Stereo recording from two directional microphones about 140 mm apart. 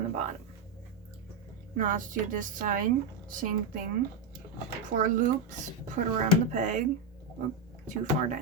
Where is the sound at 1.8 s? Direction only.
70° right (ahead or behind).